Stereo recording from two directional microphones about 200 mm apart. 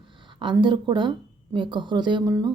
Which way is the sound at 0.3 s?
25° right (ahead or behind).